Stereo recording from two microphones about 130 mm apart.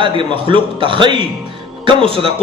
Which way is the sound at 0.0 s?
40° right (ahead or behind).